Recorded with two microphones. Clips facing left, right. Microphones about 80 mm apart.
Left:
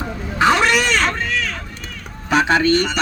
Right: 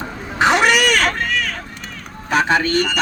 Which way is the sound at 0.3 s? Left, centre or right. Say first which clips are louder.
Even; centre.